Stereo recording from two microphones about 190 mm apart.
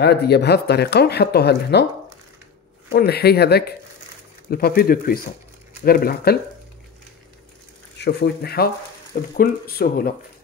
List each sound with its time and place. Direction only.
0.0 s speech: 60° left (ahead or behind)
2.9 s speech: 55° left (ahead or behind)
8.0 s speech: 60° left (ahead or behind)